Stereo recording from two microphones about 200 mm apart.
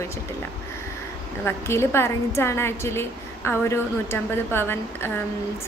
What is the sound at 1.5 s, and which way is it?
A woman's voice, 15° left (ahead or behind).